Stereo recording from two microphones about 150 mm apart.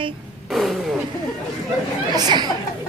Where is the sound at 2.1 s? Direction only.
30° right (ahead or behind).